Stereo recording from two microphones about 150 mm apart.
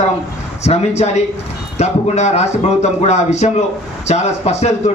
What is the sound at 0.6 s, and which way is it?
Speech, 45° left (ahead or behind).